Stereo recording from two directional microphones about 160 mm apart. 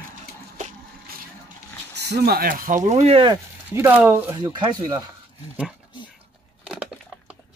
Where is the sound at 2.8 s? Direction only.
40° right (ahead or behind).